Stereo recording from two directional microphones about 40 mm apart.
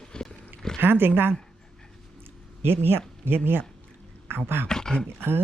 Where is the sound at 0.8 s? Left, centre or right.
Right.